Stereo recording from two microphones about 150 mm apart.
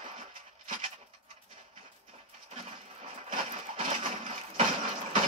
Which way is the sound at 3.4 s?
45° right (ahead or behind).